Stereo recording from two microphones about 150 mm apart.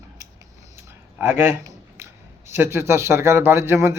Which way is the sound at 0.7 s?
15° right (ahead or behind).